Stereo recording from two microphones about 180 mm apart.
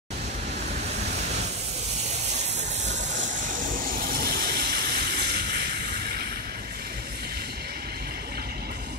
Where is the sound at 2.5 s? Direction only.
40° right (ahead or behind); by 6.2 s 60° right (ahead or behind).